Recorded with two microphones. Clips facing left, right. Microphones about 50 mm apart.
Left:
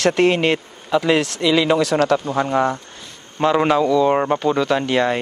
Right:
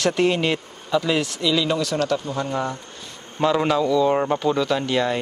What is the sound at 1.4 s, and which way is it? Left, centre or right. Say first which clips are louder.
Speech: left 5 dB; left.